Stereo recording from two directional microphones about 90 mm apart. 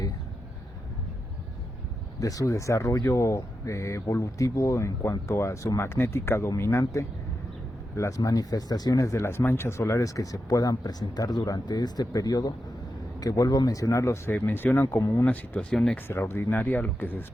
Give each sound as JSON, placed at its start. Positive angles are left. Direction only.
{"t": 2.2, "sound": "speech", "side_deg": 40}
{"t": 16.0, "sound": "speech", "side_deg": 25}